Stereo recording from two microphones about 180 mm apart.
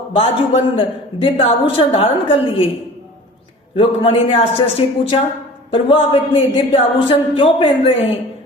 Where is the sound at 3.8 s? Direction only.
30° left (ahead or behind).